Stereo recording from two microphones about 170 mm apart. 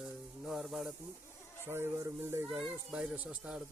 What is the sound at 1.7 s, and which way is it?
Speech, 15° right (ahead or behind).